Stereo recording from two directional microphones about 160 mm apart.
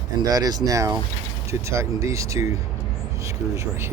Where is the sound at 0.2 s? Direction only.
25° right (ahead or behind).